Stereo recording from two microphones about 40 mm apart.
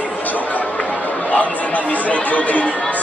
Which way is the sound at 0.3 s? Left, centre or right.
Left.